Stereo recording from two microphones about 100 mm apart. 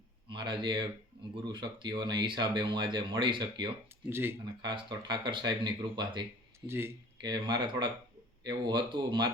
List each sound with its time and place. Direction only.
0.3 s speech: 55° right (ahead or behind)
4.1 s speech: 25° right (ahead or behind)
4.6 s speech: 45° right (ahead or behind)
6.7 s speech: 25° right (ahead or behind)
7.2 s speech: 45° right (ahead or behind)